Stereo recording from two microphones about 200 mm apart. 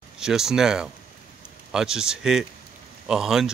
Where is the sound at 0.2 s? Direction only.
5° right (ahead or behind).